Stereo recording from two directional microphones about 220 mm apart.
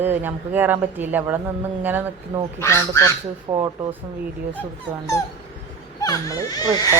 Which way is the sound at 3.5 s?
20° right (ahead or behind).